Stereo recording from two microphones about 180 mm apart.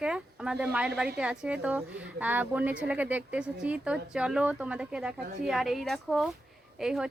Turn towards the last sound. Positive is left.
turn(degrees=-5)  # may be behind; listen again after turning